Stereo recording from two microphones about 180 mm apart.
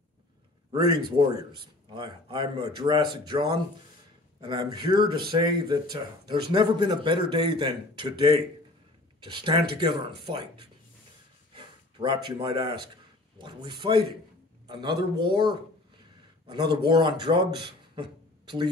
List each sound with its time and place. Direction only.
0.7 s speech: 25° right (ahead or behind)
17.9 s beatboxing: 25° right (ahead or behind)